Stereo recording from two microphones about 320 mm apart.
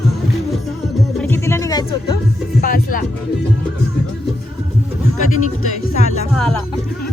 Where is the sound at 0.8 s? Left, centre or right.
Centre.